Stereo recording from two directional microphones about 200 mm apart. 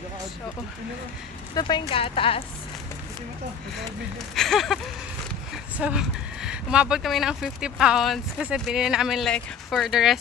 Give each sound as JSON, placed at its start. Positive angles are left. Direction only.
{"t": 1.5, "sound": "speech", "side_deg": 20}
{"t": 4.4, "sound": "speech", "side_deg": 0}